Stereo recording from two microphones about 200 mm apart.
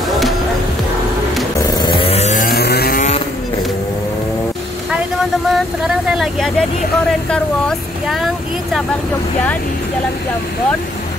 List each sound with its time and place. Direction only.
1.8 s chainsaw: 25° left (ahead or behind); by 3.0 s 50° left (ahead or behind)
5.5 s vehicle: 5° right (ahead or behind)
7.1 s speech: 5° left (ahead or behind)